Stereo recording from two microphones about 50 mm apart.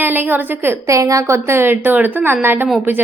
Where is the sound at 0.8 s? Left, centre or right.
Right.